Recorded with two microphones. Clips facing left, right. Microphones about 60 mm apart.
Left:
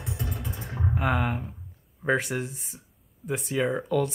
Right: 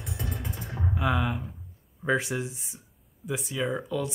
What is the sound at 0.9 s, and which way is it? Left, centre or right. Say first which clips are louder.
Speech: left 1 dB; left.